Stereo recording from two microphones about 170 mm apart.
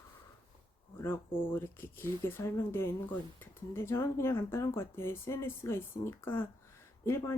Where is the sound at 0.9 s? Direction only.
15° left (ahead or behind).